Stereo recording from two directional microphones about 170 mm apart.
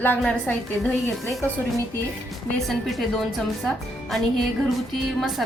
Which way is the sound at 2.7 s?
Centre (ahead or behind).